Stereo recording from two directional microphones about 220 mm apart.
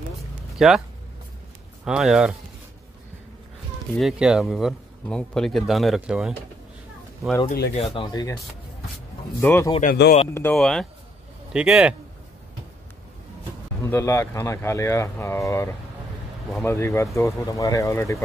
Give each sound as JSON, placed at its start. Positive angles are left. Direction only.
{"t": 0.6, "sound": "speech", "side_deg": 0}
{"t": 1.9, "sound": "a man's voice", "side_deg": 0}
{"t": 4.0, "sound": "a man's voice", "side_deg": 0}
{"t": 7.4, "sound": "speech", "side_deg": 45}
{"t": 7.7, "sound": "speech", "side_deg": 20}
{"t": 9.4, "sound": "speech", "side_deg": 10}
{"t": 9.7, "sound": "speech", "side_deg": 35}
{"t": 10.3, "sound": "a man's voice", "side_deg": 5}
{"t": 13.8, "sound": "speech", "side_deg": 10}